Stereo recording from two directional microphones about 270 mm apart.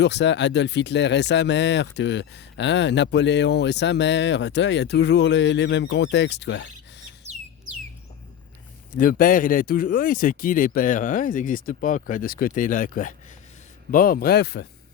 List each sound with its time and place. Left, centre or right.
0.0 s speech: left
8.9 s speech: left